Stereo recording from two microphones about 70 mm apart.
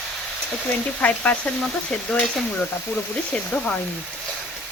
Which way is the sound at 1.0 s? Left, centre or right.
Left.